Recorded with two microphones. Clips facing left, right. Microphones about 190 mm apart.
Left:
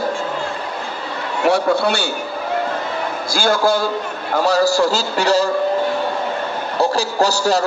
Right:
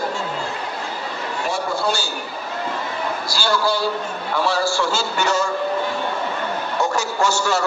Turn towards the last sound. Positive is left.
turn(degrees=35)  # may be behind; listen again after turning